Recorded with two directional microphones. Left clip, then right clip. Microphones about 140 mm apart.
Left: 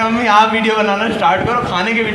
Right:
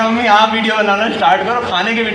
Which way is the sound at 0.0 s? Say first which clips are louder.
Right 1 dB; 50° left (ahead or behind).